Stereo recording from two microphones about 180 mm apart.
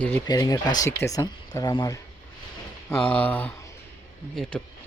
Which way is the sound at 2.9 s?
10° left (ahead or behind).